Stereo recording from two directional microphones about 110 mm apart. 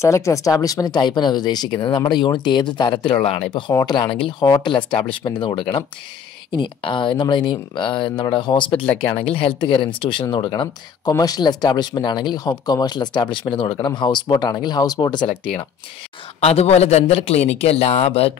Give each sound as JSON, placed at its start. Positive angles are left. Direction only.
{"t": 0.0, "sound": "speech", "side_deg": 25}
{"t": 4.4, "sound": "speech", "side_deg": 30}
{"t": 5.2, "sound": "speech", "side_deg": 45}
{"t": 9.1, "sound": "speech", "side_deg": 60}
{"t": 16.3, "sound": "a man's voice", "side_deg": 70}